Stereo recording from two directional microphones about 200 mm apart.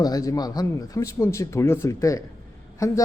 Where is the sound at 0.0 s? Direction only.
15° left (ahead or behind).